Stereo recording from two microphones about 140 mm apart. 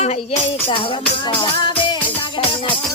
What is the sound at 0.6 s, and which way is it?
Speech, 40° left (ahead or behind).